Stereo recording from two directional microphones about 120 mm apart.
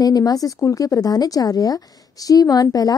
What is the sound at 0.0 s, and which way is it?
A woman's voice, 30° left (ahead or behind).